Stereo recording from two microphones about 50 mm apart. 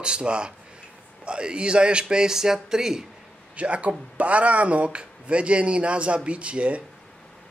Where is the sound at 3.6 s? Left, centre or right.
Right.